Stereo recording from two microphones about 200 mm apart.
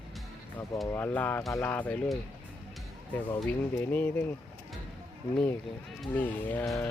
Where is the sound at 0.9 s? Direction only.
10° left (ahead or behind).